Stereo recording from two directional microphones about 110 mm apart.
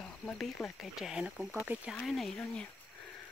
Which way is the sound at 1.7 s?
15° right (ahead or behind).